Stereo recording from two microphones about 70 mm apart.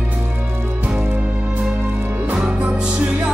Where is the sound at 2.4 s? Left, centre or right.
Centre.